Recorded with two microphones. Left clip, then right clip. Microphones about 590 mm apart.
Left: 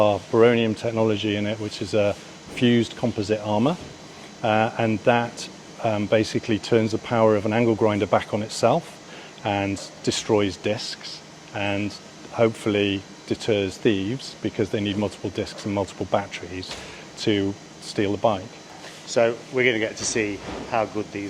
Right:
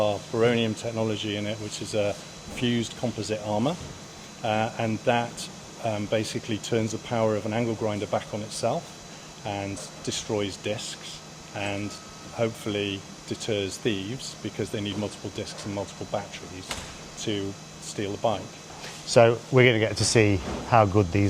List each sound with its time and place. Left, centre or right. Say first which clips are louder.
0.0 s speech: left 6 dB; left
17.9 s speech: left 5 dB; left
19.1 s speech: right 2 dB; right